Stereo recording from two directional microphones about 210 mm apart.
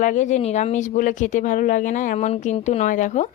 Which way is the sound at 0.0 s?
35° left (ahead or behind).